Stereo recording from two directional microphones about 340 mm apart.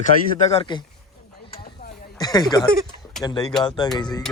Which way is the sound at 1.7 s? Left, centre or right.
Left.